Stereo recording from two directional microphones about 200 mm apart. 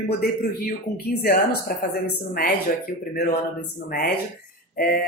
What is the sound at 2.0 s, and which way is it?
Speech, 50° left (ahead or behind).